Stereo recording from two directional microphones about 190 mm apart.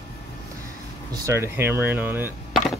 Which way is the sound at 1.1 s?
15° right (ahead or behind).